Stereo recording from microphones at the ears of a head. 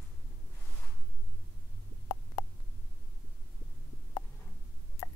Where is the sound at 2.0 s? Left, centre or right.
Left.